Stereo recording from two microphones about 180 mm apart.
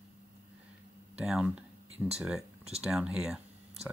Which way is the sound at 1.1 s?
5° right (ahead or behind).